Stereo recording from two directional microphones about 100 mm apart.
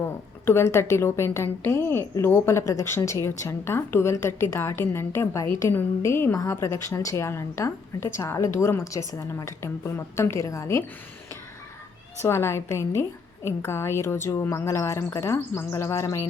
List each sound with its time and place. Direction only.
0.0 s a woman's voice: 25° left (ahead or behind)
12.2 s a woman's voice: 25° left (ahead or behind)